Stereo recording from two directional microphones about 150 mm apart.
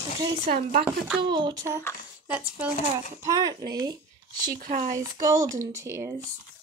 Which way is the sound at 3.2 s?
25° right (ahead or behind).